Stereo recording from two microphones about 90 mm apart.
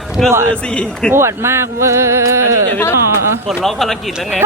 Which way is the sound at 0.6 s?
10° left (ahead or behind).